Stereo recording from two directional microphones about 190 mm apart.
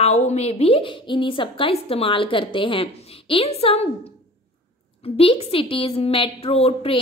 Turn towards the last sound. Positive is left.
turn(degrees=30)  # may be behind; listen again after turning